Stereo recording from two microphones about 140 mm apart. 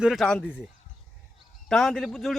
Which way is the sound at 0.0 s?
Centre (ahead or behind).